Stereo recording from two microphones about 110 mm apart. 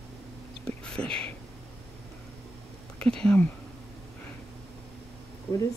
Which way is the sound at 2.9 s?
10° left (ahead or behind).